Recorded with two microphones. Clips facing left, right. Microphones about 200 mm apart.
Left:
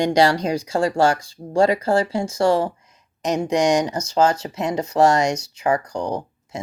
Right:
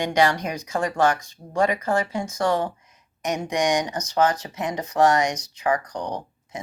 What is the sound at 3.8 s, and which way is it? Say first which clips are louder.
Speech: left 3 dB; 30° left (ahead or behind).